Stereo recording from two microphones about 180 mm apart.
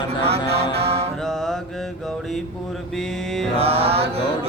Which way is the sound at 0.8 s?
35° right (ahead or behind).